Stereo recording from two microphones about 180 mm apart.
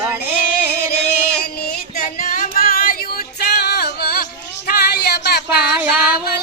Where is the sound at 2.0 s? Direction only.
45° left (ahead or behind); by 5.6 s 60° left (ahead or behind).